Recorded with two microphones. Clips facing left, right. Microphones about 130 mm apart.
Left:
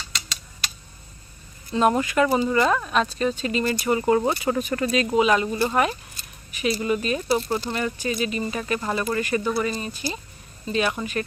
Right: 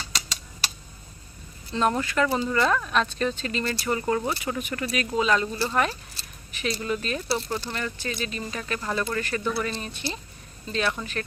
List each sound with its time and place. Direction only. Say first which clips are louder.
1.7 s speech: left 4 dB; 10° left (ahead or behind)
4.2 s speech: left 6 dB; 35° left (ahead or behind); by 9.5 s 15° left (ahead or behind)
9.5 s speech: left 4 dB; centre (ahead or behind)